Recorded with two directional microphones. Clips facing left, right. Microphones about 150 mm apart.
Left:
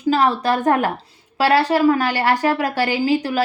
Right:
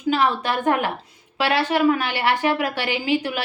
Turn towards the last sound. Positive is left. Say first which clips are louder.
# left 5 dB
turn(degrees=40)  # may be behind; listen again after turning